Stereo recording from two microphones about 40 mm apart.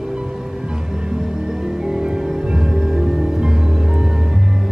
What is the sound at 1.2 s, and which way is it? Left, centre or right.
Music, centre.